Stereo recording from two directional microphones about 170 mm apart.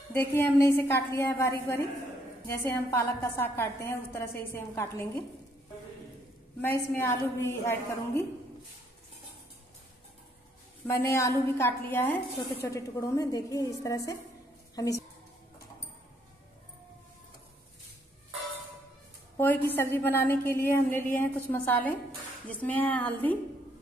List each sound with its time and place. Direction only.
0.1 s a woman's voice: 15° left (ahead or behind)
6.6 s a woman's voice: 15° left (ahead or behind)
10.9 s a woman's voice: 15° left (ahead or behind)
19.3 s a woman's voice: 10° left (ahead or behind)